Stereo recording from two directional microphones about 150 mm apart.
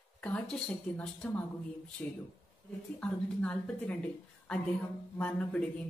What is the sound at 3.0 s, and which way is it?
A woman's voice, 5° left (ahead or behind).